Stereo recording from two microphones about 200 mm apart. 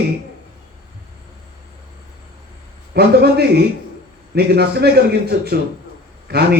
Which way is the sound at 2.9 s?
50° right (ahead or behind).